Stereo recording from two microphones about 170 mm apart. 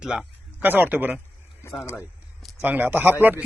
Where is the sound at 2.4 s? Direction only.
5° right (ahead or behind).